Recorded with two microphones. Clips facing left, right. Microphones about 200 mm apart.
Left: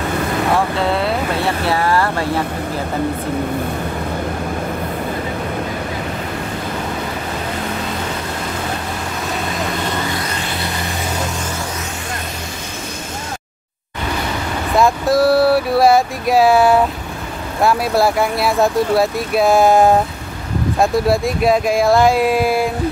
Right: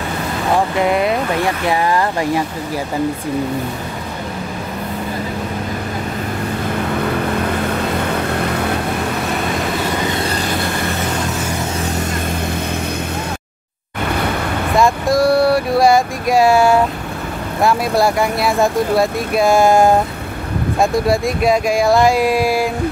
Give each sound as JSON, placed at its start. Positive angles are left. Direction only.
{"t": 0.7, "sound": "speech", "side_deg": -15}
{"t": 14.8, "sound": "speech", "side_deg": 0}